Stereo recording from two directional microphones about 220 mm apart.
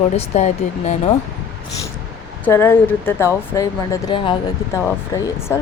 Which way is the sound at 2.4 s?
10° left (ahead or behind).